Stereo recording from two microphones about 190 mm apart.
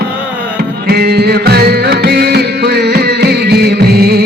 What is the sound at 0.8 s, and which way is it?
Music, 55° right (ahead or behind).